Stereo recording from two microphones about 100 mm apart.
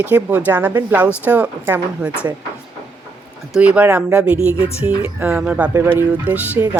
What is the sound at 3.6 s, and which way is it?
Speech, 15° right (ahead or behind).